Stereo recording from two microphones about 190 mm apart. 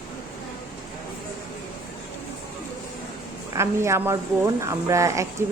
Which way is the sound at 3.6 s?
15° right (ahead or behind).